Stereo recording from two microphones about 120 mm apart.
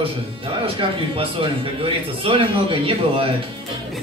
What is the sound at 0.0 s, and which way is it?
Speech, 50° right (ahead or behind).